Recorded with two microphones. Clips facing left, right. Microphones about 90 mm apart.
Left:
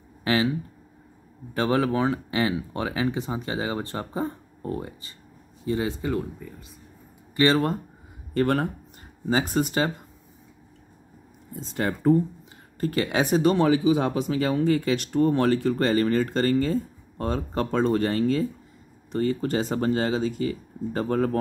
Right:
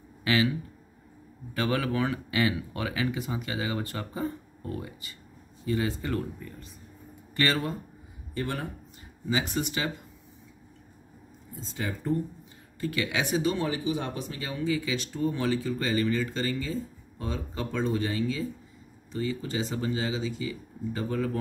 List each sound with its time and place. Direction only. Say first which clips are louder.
0.2 s speech: left 2 dB; 30° left (ahead or behind)
8.4 s speech: left 10 dB; 60° left (ahead or behind)
9.2 s speech: left 5 dB; 40° left (ahead or behind)
11.7 s speech: left 8 dB; 65° left (ahead or behind)
12.8 s speech: left 5 dB; 40° left (ahead or behind)
13.6 s speech: left 9 dB; 90° left; by 21.4 s 45° left (ahead or behind)